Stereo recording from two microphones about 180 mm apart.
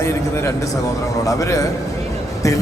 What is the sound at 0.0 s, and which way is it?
A man's voice, 15° left (ahead or behind).